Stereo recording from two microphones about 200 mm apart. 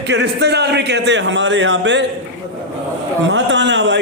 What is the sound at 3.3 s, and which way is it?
Speech, 65° right (ahead or behind).